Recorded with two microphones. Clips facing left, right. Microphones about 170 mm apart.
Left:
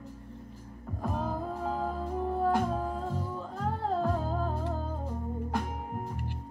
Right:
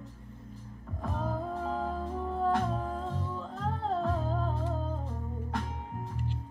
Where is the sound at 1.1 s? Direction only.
5° left (ahead or behind).